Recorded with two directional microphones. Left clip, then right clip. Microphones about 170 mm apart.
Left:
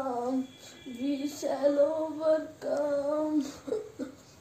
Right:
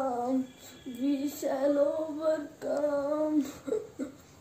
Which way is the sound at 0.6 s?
20° right (ahead or behind).